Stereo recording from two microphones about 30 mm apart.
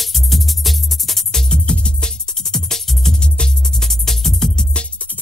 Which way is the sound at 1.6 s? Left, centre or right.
Left.